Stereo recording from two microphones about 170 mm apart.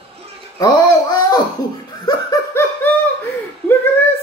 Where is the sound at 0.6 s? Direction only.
20° left (ahead or behind).